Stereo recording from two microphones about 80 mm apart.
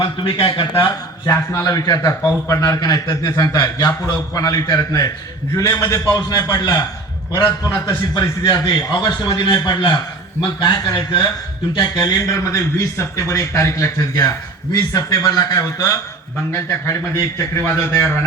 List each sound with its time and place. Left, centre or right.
0.0 s speech: left
1.3 s a man's voice: left
7.3 s a man's voice: left
8.4 s a man's voice: left
10.6 s speech: left
12.8 s a man's voice: left